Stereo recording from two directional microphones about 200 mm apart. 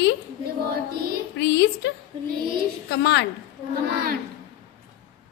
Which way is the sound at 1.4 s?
60° left (ahead or behind).